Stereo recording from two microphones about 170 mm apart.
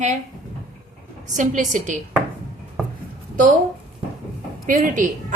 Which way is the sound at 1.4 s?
45° right (ahead or behind).